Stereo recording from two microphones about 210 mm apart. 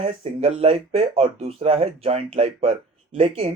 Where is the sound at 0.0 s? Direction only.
30° right (ahead or behind).